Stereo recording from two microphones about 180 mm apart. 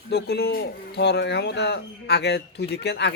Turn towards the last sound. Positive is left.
turn(degrees=70)  # may be behind; listen again after turning